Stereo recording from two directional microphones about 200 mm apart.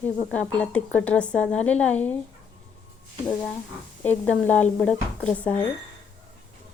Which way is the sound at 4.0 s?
10° left (ahead or behind).